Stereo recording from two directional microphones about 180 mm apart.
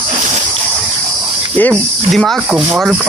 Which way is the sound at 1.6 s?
5° left (ahead or behind).